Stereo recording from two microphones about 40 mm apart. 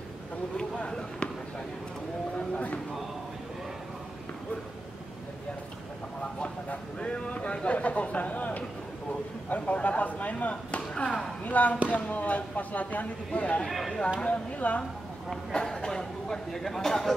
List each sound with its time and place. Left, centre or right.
2.3 s a sound: left
6.2 s a sound: left
9.5 s chop: left
11.4 s speech: left
13.7 s speech: centre
14.2 s speech: left
15.6 s speech: centre